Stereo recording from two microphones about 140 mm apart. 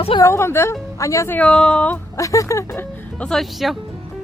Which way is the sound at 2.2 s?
25° left (ahead or behind).